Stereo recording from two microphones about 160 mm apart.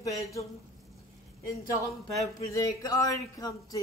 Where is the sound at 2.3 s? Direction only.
20° left (ahead or behind).